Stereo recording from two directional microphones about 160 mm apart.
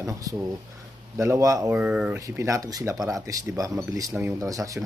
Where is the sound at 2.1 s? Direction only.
15° right (ahead or behind).